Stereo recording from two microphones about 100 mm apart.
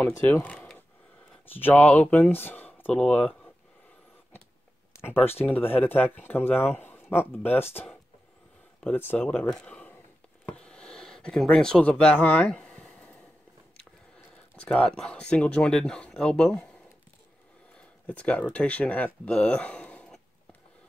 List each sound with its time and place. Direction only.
0.0 s speech: 25° left (ahead or behind)
5.0 s speech: 20° left (ahead or behind)
8.9 s speech: 20° left (ahead or behind)
10.4 s a sound: 10° left (ahead or behind)
14.7 s speech: 10° left (ahead or behind)
18.0 s speech: 15° left (ahead or behind)